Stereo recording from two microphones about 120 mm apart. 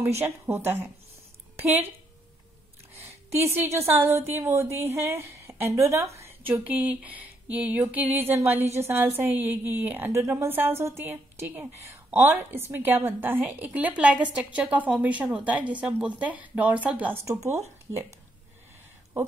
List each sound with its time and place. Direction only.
0.2 s speech: 20° right (ahead or behind)
3.0 s a woman's voice: 25° right (ahead or behind)
6.1 s a sound: 20° right (ahead or behind)
6.5 s a woman's voice: 15° right (ahead or behind)
17.3 s speech: 25° right (ahead or behind)